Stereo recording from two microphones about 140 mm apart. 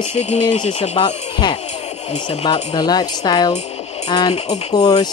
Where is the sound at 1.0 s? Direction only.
35° left (ahead or behind).